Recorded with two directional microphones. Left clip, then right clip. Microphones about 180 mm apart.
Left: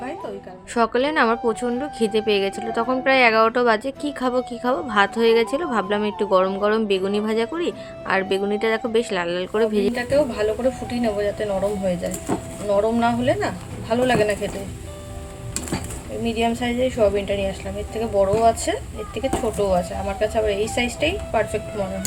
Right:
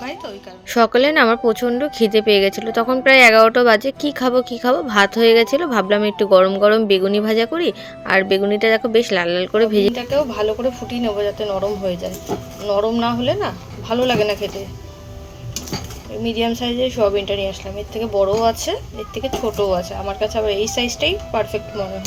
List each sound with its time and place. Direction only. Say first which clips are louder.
0.7 s speech: right 6 dB; 25° right (ahead or behind)
9.9 s speech: right 1 dB; 10° right (ahead or behind)
16.2 s speech: right 2 dB; 10° right (ahead or behind)